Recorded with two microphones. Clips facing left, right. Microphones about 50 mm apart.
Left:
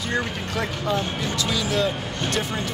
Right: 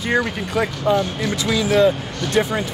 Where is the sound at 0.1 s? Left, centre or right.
Centre.